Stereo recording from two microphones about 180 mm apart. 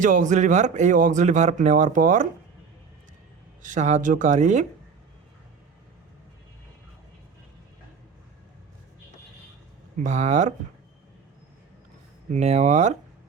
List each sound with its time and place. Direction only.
0.0 s speech: 45° right (ahead or behind)
3.6 s speech: 45° right (ahead or behind)
10.0 s speech: 40° right (ahead or behind)
12.3 s speech: 40° right (ahead or behind)